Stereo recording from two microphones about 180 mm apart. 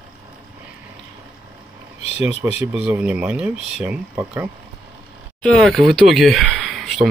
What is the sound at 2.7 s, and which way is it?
Speech, 5° right (ahead or behind).